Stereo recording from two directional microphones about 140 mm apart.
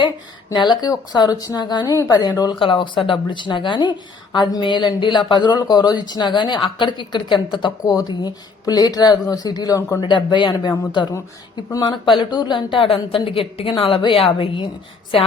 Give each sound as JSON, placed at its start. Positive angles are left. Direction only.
{"t": 0.5, "sound": "a woman's voice", "side_deg": 30}
{"t": 10.0, "sound": "speech", "side_deg": 35}